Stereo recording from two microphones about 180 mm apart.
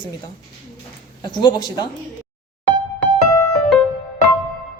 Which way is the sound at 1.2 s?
25° left (ahead or behind).